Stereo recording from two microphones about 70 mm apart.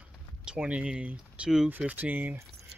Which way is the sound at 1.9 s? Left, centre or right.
Right.